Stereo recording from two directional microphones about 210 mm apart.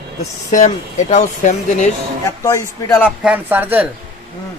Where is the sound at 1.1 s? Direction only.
35° left (ahead or behind).